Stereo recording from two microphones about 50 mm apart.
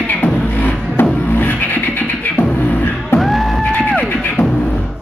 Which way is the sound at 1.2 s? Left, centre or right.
Left.